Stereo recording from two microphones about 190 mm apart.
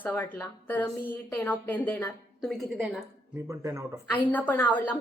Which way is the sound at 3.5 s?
15° right (ahead or behind).